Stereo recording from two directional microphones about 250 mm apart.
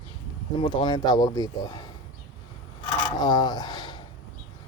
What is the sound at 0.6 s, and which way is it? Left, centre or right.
Speech, centre.